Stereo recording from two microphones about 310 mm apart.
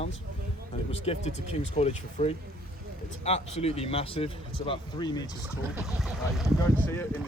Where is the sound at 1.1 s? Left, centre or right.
Centre.